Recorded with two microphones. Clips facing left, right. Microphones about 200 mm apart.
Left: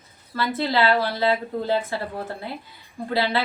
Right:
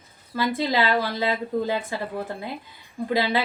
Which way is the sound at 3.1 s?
15° right (ahead or behind).